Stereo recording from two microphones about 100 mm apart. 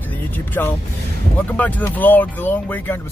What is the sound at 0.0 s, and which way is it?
Vehicle, 15° left (ahead or behind).